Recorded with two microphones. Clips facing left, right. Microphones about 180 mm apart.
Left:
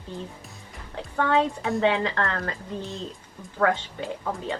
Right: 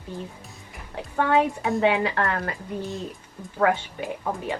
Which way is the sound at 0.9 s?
15° right (ahead or behind).